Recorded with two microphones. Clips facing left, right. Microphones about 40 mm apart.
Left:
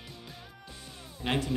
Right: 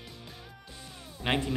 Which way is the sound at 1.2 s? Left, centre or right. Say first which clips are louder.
Right 1 dB; centre.